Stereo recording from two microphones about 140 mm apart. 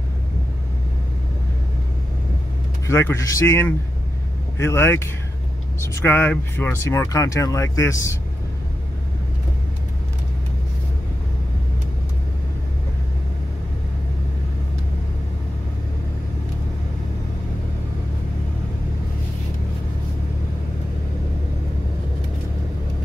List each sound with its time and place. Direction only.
2.9 s speech: 20° left (ahead or behind)